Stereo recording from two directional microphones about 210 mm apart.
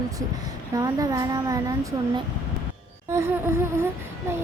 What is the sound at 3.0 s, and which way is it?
Speech, 10° right (ahead or behind).